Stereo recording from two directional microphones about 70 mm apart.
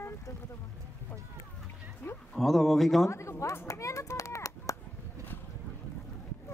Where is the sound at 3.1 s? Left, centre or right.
Left.